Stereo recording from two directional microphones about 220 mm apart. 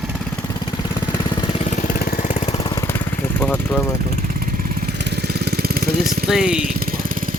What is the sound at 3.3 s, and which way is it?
Speech, 10° left (ahead or behind).